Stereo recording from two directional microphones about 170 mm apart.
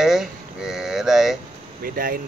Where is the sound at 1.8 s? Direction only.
55° right (ahead or behind).